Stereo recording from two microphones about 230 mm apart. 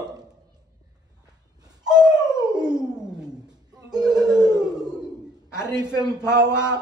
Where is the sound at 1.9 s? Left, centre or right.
Centre.